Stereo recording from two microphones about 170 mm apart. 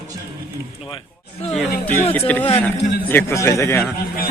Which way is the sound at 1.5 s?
Centre (ahead or behind).